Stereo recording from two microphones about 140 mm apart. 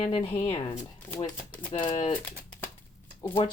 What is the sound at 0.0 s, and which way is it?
Speech, 45° left (ahead or behind).